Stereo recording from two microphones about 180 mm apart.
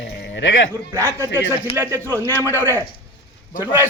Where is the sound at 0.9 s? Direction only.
15° right (ahead or behind).